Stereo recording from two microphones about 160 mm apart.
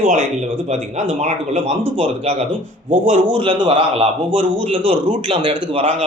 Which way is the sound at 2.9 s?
55° right (ahead or behind).